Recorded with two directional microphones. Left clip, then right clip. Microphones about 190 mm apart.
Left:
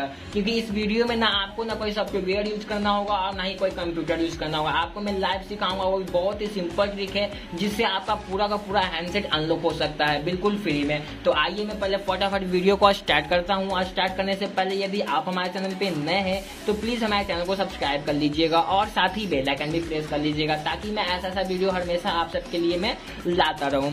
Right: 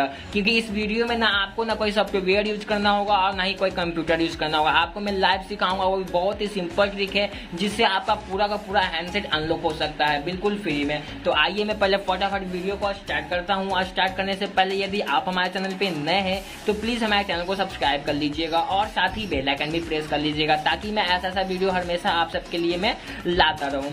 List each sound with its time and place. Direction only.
0.7 s speech: 10° left (ahead or behind)
1.7 s speech: 15° right (ahead or behind); by 10.3 s 15° left (ahead or behind)
11.2 s speech: centre (ahead or behind)
11.5 s speech: 20° right (ahead or behind)
12.1 s speech: centre (ahead or behind)
12.6 s speech: 35° left (ahead or behind)
13.5 s speech: 5° left (ahead or behind)
18.4 s speech: 20° left (ahead or behind)
19.6 s speech: centre (ahead or behind)
23.4 s speech: 15° left (ahead or behind)